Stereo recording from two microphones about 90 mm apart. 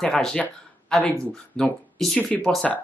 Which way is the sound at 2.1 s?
15° left (ahead or behind).